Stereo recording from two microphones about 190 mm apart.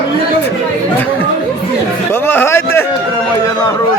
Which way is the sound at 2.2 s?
10° left (ahead or behind).